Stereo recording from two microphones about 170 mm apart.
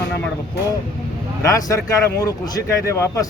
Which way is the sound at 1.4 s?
20° left (ahead or behind).